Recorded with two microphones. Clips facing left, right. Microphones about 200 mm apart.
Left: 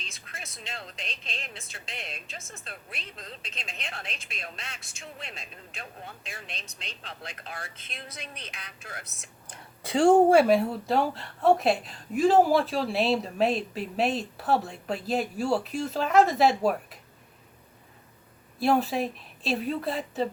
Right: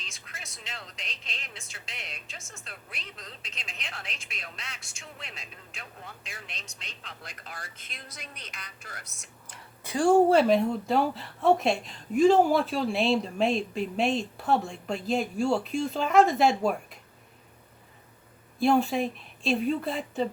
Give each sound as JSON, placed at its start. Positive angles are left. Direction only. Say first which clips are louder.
{"t": 0.9, "sound": "a woman's voice", "louder": "left 4 dB", "side_deg": 25}
{"t": 6.1, "sound": "a woman's voice", "louder": "left 2 dB", "side_deg": 25}
{"t": 10.2, "sound": "speech", "louder": "left 1 dB", "side_deg": 10}
{"t": 18.6, "sound": "speech", "louder": "right 1 dB", "side_deg": 0}